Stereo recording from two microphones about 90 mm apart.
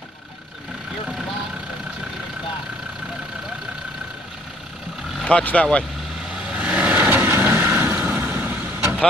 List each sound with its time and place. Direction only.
5.2 s speech: 15° left (ahead or behind)
6.3 s vehicle: 10° right (ahead or behind)